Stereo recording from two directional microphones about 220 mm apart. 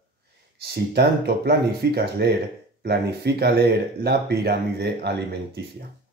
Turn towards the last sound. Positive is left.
turn(degrees=-50)  # may be behind; listen again after turning